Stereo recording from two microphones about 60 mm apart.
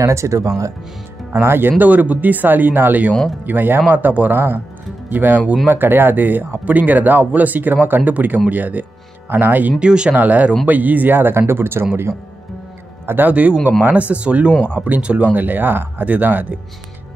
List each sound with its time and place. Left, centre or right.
0.0 s speech: right
1.4 s speech: right
9.8 s speech: centre
10.2 s speech: right
13.3 s speech: right
14.5 s speech: centre
14.8 s speech: right